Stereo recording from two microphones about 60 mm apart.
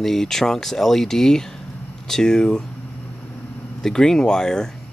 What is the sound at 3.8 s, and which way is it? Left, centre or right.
Speech, centre.